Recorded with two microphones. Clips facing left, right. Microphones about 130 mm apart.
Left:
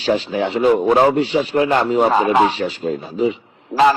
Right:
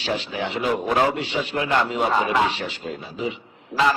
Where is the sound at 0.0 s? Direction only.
40° left (ahead or behind).